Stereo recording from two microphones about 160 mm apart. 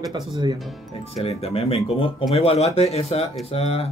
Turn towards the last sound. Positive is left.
turn(degrees=40)  # may be behind; listen again after turning